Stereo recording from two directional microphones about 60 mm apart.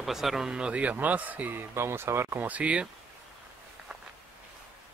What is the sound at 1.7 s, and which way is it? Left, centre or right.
Speech, right.